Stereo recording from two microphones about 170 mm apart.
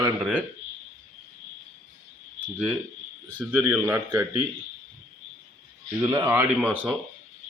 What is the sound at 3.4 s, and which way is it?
A man's voice, 10° right (ahead or behind).